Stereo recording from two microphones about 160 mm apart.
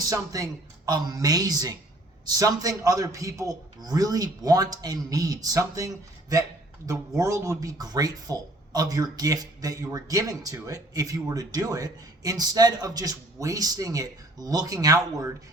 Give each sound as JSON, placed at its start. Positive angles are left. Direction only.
{"t": 0.0, "sound": "speech", "side_deg": -20}